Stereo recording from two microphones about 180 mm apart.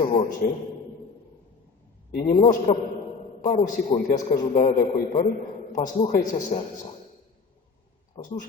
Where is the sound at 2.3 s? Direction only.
40° left (ahead or behind).